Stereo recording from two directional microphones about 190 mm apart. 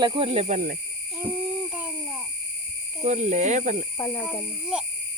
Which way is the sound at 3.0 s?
40° right (ahead or behind).